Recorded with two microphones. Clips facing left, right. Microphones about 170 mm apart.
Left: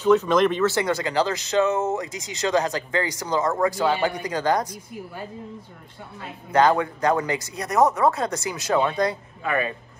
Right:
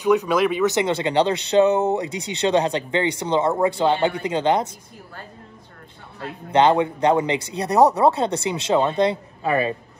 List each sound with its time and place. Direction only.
0.0 s speech: 15° right (ahead or behind)
6.5 s speech: 25° right (ahead or behind)